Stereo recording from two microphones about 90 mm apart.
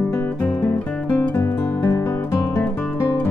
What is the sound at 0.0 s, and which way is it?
Music, 20° left (ahead or behind).